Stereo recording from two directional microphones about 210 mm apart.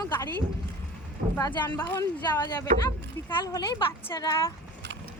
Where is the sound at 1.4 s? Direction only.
20° left (ahead or behind).